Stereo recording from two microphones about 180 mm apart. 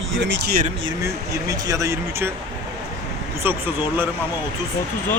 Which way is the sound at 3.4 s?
10° right (ahead or behind).